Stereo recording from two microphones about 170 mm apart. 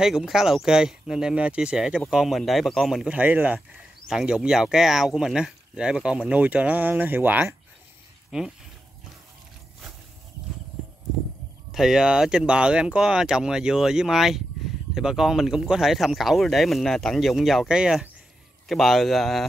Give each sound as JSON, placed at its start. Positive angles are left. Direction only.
{"t": 0.0, "sound": "speech", "side_deg": -5}
{"t": 11.7, "sound": "speech", "side_deg": 0}